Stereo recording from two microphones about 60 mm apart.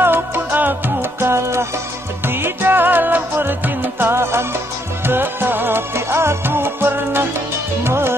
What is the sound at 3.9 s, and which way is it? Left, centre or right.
Music, right.